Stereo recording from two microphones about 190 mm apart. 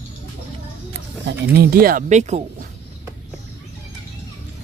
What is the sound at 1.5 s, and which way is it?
Speech, 55° right (ahead or behind).